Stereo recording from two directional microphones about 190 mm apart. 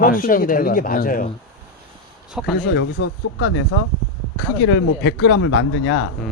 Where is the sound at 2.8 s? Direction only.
70° left (ahead or behind); by 3.8 s 85° left.